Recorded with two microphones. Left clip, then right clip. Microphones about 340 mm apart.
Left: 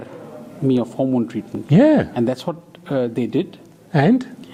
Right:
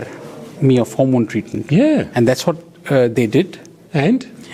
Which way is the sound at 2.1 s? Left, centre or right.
Right.